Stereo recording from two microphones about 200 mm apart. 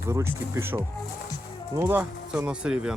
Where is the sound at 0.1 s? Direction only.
15° right (ahead or behind).